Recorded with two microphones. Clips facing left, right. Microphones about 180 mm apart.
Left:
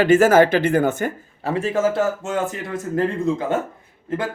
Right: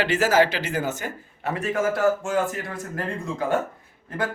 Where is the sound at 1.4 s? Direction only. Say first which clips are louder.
Left 4 dB; 30° left (ahead or behind).